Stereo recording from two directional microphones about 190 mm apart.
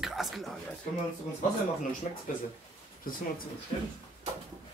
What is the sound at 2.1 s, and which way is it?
Speech, 40° left (ahead or behind).